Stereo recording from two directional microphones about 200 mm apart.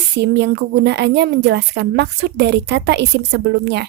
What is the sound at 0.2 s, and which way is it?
A woman's voice, 55° right (ahead or behind).